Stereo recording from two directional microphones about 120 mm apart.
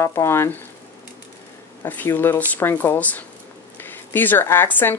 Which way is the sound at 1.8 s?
20° left (ahead or behind).